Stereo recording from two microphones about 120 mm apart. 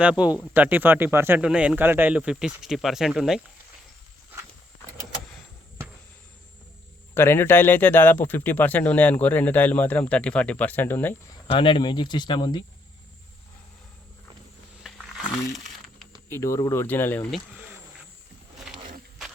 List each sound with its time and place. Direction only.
0.0 s speech: 10° right (ahead or behind)
7.1 s speech: 20° left (ahead or behind)
11.4 s speech: 45° left (ahead or behind)
14.8 s a sound: 5° right (ahead or behind)
15.5 s crumpling: centre (ahead or behind)
16.3 s speech: 25° left (ahead or behind)
16.8 s speech: 15° left (ahead or behind)